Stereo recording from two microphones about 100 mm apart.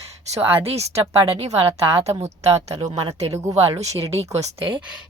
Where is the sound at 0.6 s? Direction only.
90° right.